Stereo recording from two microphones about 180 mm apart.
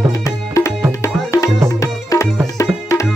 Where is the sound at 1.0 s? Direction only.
15° left (ahead or behind).